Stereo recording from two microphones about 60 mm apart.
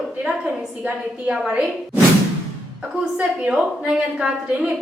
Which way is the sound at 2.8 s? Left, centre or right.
Centre.